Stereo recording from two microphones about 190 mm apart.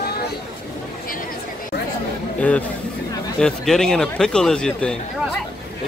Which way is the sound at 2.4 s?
5° left (ahead or behind).